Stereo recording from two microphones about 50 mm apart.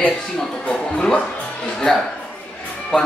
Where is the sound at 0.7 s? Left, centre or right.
Left.